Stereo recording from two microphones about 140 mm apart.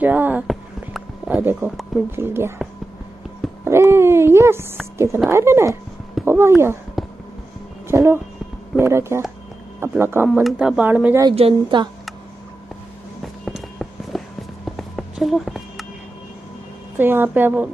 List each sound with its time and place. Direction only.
0.0 s speech: 10° right (ahead or behind)
0.5 s a sound: 5° right (ahead or behind)
2.0 s speech: 15° right (ahead or behind)
3.6 s speech: 20° right (ahead or behind)
7.9 s speech: 20° right (ahead or behind)
10.4 s speech: centre (ahead or behind)
10.8 s speech: 10° right (ahead or behind)
11.3 s a woman's voice: 45° right (ahead or behind)
13.2 s walk: centre (ahead or behind)
17.0 s speech: 15° right (ahead or behind)